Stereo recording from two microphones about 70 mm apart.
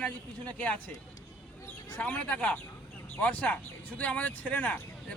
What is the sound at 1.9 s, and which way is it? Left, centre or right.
Speech, left.